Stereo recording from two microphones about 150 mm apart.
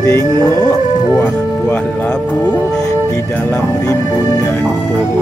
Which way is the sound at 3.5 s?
20° left (ahead or behind).